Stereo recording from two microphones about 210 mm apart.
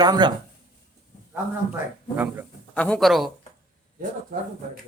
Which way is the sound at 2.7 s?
5° left (ahead or behind).